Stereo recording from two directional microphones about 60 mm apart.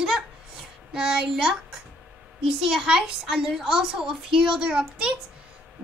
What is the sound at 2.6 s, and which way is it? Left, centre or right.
A woman's voice, centre.